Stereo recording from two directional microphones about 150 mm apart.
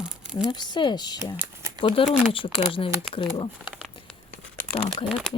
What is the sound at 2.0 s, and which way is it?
Speech, 35° left (ahead or behind).